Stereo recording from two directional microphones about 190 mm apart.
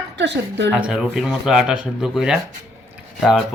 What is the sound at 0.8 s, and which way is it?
Speech, 5° right (ahead or behind).